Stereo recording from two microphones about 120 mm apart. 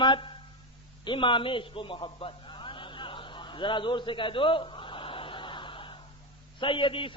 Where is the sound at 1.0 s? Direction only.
45° left (ahead or behind).